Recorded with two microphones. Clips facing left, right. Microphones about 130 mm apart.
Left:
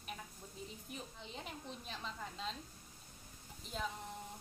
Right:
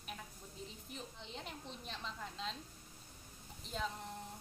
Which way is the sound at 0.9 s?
5° left (ahead or behind).